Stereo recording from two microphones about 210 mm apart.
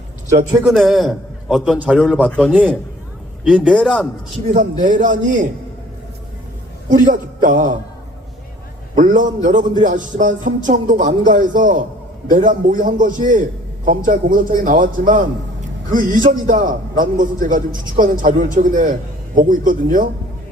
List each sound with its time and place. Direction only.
0.6 s a man's voice: centre (ahead or behind)
4.4 s a man's voice: 40° right (ahead or behind)
7.0 s a man's voice: 40° right (ahead or behind)
9.0 s a man's voice: 40° right (ahead or behind)